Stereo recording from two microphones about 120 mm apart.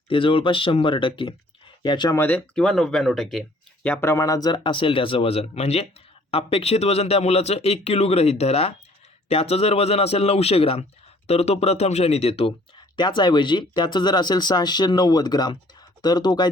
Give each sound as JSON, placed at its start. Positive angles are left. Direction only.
{"t": 0.1, "sound": "speech", "side_deg": 45}
{"t": 2.1, "sound": "speech", "side_deg": 20}
{"t": 2.6, "sound": "speech", "side_deg": 5}
{"t": 3.8, "sound": "speech", "side_deg": 15}
{"t": 13.0, "sound": "speech", "side_deg": 40}